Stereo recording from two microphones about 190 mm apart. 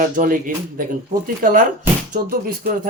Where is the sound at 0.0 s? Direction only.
45° right (ahead or behind).